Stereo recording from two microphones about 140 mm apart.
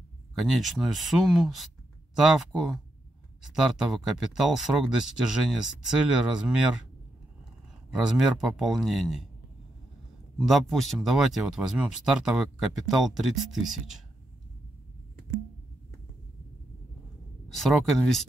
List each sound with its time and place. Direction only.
0.3 s speech: centre (ahead or behind)
8.0 s speech: 5° right (ahead or behind)
10.3 s speech: centre (ahead or behind)
17.5 s speech: centre (ahead or behind)